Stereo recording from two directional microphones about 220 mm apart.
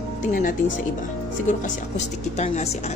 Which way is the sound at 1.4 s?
35° left (ahead or behind).